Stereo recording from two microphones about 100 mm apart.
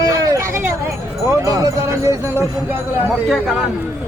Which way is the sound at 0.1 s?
30° right (ahead or behind).